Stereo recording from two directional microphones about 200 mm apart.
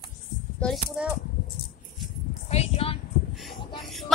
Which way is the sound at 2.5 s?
30° left (ahead or behind).